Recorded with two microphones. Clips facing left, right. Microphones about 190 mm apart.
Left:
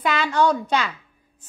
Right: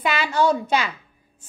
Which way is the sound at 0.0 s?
10° right (ahead or behind).